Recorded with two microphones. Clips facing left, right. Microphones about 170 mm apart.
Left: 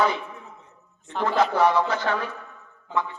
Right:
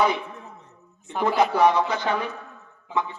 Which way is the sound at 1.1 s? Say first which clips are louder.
Right 1 dB; 10° right (ahead or behind).